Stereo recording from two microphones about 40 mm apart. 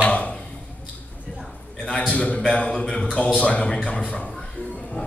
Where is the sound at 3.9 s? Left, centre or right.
Left.